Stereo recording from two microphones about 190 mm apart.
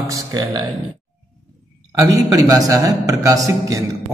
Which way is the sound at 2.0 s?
20° right (ahead or behind).